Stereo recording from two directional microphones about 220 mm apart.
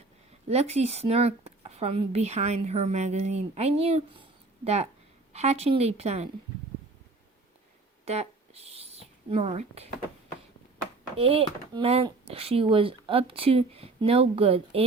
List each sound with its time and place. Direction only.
0.4 s speech: 30° right (ahead or behind)
8.0 s speech: 30° right (ahead or behind)
11.2 s speech: 25° right (ahead or behind)